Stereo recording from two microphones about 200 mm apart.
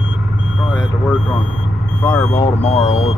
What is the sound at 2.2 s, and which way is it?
Speech, 30° left (ahead or behind).